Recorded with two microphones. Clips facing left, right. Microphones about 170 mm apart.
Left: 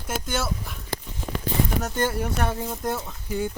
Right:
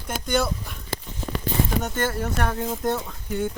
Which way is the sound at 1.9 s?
15° left (ahead or behind).